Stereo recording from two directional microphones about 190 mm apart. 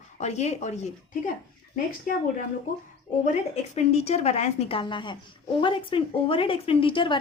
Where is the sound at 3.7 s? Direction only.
35° left (ahead or behind).